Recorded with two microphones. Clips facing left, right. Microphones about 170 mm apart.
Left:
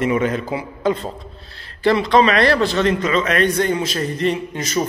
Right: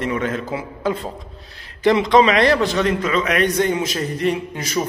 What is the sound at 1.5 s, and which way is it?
A man's voice, 20° right (ahead or behind).